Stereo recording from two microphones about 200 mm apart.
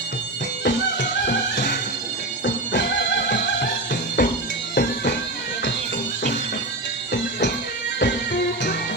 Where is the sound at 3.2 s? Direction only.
55° left (ahead or behind).